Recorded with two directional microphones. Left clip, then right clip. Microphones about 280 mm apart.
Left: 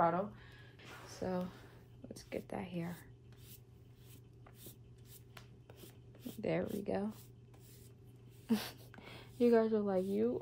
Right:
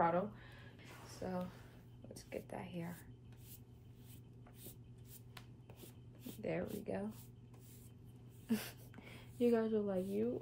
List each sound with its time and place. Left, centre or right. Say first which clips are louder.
1.2 s speech: left 4 dB; left
5.3 s rub: left 1 dB; centre
6.4 s speech: left 5 dB; left
8.5 s a woman's voice: left 4 dB; left